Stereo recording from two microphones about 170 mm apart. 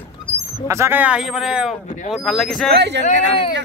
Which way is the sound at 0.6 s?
15° right (ahead or behind).